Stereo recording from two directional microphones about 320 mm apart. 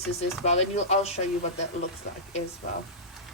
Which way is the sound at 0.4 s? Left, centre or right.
Left.